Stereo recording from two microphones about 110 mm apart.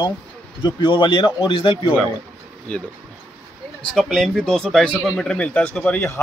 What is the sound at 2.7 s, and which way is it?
Speech, 10° left (ahead or behind).